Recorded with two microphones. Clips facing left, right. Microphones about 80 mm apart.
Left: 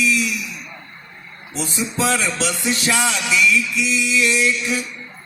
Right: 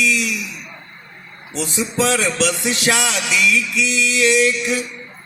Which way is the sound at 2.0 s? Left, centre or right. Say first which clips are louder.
Right 2 dB; right.